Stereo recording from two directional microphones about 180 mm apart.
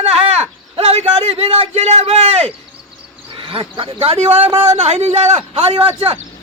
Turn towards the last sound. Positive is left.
turn(degrees=-35)  # may be behind; listen again after turning